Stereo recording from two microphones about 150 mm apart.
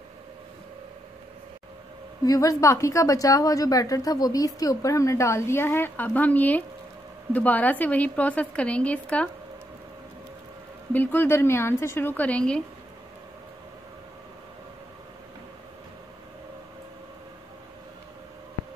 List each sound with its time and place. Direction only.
2.2 s a woman's voice: 20° left (ahead or behind)
10.9 s a woman's voice: 10° left (ahead or behind)